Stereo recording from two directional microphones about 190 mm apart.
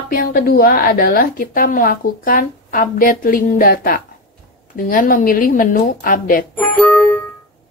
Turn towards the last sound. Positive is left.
turn(degrees=5)  # may be behind; listen again after turning